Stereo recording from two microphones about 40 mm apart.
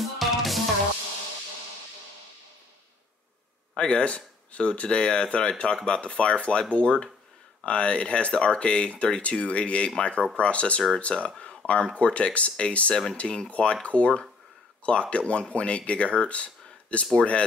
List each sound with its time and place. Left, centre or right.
0.0 s music: centre
3.7 s speech: left